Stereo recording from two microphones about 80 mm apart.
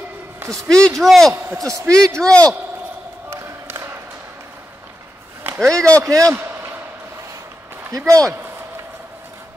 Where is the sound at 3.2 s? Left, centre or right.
Right.